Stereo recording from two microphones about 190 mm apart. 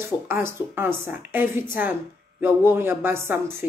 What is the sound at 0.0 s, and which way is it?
A woman's voice, 15° right (ahead or behind).